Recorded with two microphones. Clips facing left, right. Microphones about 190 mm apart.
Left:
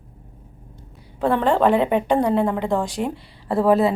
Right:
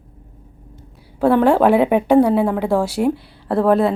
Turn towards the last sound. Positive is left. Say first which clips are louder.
# right 2 dB
turn(degrees=0)  # may be behind; listen again after turning